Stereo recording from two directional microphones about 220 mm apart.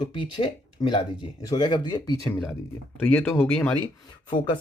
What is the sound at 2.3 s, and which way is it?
Speech, 5° left (ahead or behind).